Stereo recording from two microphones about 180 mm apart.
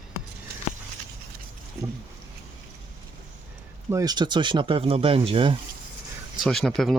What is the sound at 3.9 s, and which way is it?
Speech, 20° right (ahead or behind).